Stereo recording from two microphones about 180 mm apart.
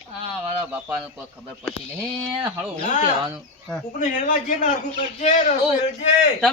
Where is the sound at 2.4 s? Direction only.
10° right (ahead or behind).